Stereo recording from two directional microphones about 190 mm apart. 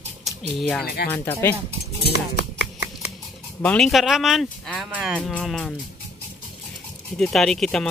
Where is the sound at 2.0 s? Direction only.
60° left (ahead or behind).